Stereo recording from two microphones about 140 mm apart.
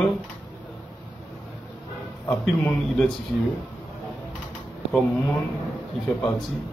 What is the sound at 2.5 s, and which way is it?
Speech, 5° left (ahead or behind).